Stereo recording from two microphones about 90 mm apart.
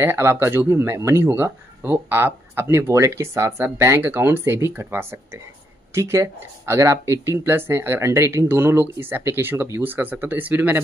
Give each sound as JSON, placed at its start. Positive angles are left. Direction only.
{"t": 0.0, "sound": "speech", "side_deg": -30}